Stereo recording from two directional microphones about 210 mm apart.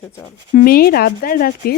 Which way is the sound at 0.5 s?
45° left (ahead or behind).